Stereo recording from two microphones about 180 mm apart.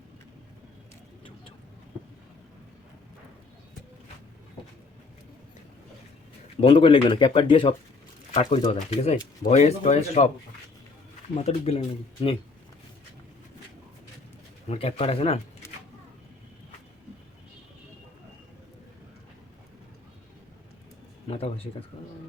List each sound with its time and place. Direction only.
6.6 s speech: 30° left (ahead or behind)
11.3 s speech: 35° left (ahead or behind)
14.7 s speech: 35° left (ahead or behind)
21.2 s speech: 35° left (ahead or behind)